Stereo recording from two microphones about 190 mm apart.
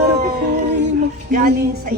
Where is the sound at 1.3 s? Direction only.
45° right (ahead or behind).